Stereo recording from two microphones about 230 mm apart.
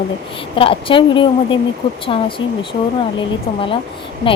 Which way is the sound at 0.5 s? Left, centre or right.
Left.